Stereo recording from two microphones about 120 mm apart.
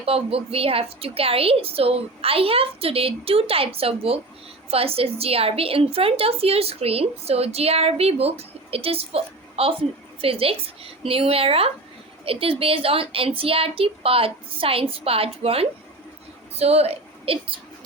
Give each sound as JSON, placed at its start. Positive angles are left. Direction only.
{"t": 0.0, "sound": "a woman's voice", "side_deg": -55}